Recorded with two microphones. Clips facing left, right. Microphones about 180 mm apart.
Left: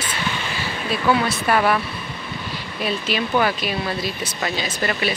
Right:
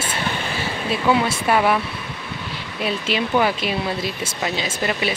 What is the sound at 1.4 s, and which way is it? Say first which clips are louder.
Speech: even; 10° right (ahead or behind).